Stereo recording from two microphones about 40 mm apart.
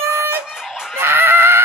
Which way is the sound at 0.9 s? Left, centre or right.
Right.